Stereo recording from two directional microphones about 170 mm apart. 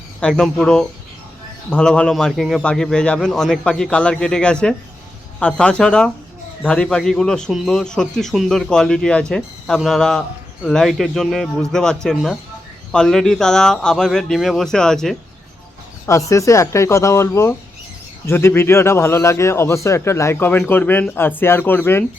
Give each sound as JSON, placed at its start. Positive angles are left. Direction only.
{"t": 0.2, "sound": "a man's voice", "side_deg": 5}
{"t": 16.0, "sound": "a man's voice", "side_deg": 20}